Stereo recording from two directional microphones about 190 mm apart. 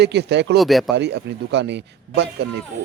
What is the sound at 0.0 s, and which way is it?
Speech, 65° right (ahead or behind).